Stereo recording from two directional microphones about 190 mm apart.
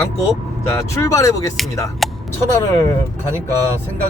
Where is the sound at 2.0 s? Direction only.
Centre (ahead or behind).